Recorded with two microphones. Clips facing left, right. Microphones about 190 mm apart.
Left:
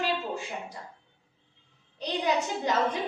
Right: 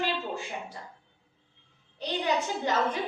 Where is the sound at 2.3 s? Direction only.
Centre (ahead or behind).